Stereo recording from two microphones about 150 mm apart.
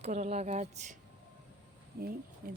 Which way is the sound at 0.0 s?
50° right (ahead or behind).